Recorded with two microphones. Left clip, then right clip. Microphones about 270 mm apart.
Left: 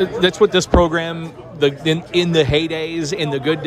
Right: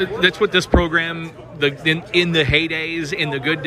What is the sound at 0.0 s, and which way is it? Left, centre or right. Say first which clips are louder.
A man's voice: left 2 dB; centre.